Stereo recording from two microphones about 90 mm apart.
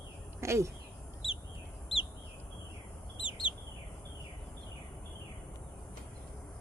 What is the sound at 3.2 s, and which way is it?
Bird, 65° left (ahead or behind).